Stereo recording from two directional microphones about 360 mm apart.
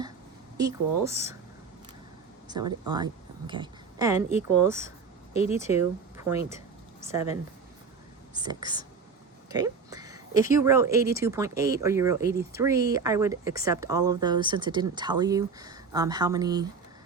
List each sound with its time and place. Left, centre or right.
0.5 s speech: centre
2.5 s a woman's voice: centre
5.3 s speech: centre
5.5 s speech: centre